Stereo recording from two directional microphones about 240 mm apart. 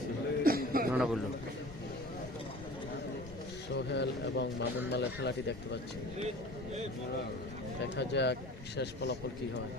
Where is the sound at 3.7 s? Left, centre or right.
Left.